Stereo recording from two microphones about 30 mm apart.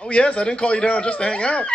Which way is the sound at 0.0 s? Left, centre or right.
Left.